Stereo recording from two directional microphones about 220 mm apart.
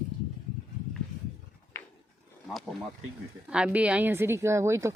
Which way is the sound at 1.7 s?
10° left (ahead or behind).